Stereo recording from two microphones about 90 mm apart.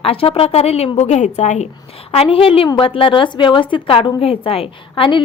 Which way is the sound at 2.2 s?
90° left.